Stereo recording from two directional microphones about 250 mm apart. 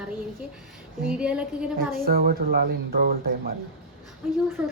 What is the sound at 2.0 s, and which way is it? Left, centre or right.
Speech, right.